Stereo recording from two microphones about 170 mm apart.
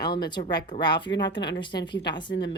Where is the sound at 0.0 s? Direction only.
25° left (ahead or behind).